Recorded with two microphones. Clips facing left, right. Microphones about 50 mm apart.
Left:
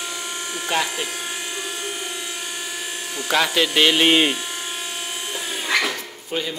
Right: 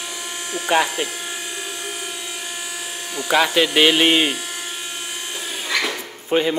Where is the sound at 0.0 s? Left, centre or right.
Centre.